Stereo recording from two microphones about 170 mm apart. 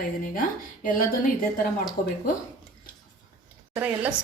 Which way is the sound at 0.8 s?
55° left (ahead or behind).